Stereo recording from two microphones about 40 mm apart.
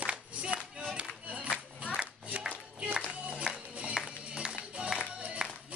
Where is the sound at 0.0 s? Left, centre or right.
Right.